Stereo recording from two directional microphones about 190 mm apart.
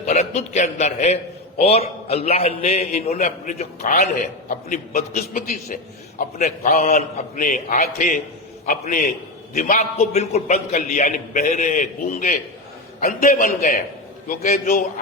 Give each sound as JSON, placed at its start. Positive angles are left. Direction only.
{"t": 0.0, "sound": "a man's voice", "side_deg": 35}